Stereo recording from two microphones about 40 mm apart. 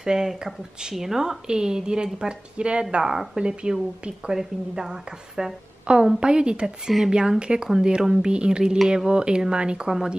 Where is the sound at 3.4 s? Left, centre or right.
Right.